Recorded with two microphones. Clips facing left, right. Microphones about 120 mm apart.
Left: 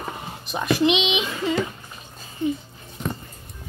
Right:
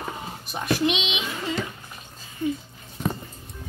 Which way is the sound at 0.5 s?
90° left.